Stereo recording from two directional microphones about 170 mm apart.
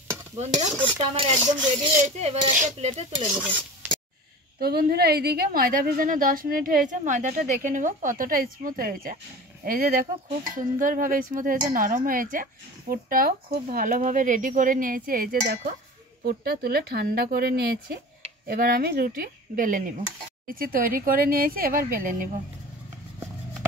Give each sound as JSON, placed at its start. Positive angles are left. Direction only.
{"t": 0.4, "sound": "speech", "side_deg": -45}
{"t": 0.7, "sound": "stir", "side_deg": -30}
{"t": 2.1, "sound": "speech", "side_deg": -40}
{"t": 3.3, "sound": "stir", "side_deg": -10}
{"t": 4.6, "sound": "a woman's voice", "side_deg": -65}